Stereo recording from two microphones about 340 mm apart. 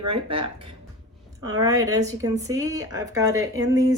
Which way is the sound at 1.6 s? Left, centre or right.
Centre.